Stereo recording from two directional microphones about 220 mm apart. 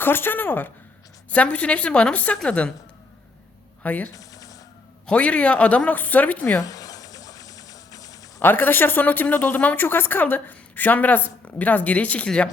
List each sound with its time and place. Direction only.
0.0 s a woman's voice: 10° left (ahead or behind)
3.8 s a sound: 5° left (ahead or behind)
5.0 s speech: 5° left (ahead or behind)